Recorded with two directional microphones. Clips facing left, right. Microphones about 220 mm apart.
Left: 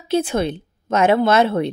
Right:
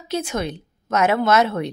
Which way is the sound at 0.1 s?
30° left (ahead or behind).